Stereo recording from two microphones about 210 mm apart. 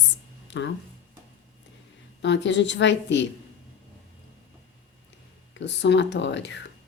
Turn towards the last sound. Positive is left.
turn(degrees=55)  # may be behind; listen again after turning